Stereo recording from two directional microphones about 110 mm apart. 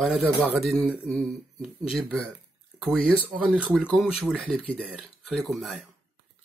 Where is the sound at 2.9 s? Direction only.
10° left (ahead or behind).